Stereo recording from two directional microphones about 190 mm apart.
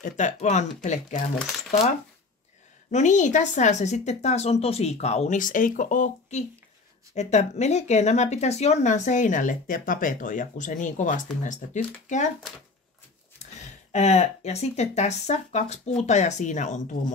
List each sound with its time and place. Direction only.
0.0 s speech: 40° left (ahead or behind)
1.7 s speech: 40° left (ahead or behind)
13.6 s speech: 35° left (ahead or behind)